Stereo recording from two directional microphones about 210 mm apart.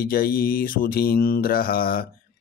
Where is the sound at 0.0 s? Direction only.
45° left (ahead or behind).